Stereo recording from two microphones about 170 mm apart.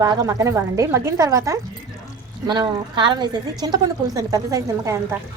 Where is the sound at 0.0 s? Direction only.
20° right (ahead or behind).